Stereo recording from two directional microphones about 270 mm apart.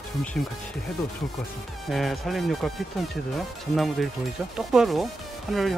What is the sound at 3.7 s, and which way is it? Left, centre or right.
Speech, centre.